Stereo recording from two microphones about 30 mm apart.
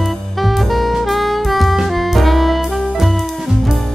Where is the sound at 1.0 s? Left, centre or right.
Centre.